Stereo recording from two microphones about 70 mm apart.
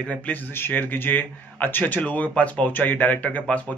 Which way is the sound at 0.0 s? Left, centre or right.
Left.